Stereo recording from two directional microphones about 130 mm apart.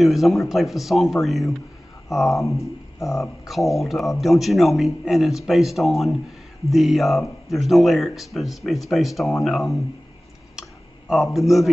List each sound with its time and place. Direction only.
0.0 s speech: centre (ahead or behind)
2.3 s speech: 25° left (ahead or behind)
3.2 s speech: centre (ahead or behind)
11.3 s speech: centre (ahead or behind)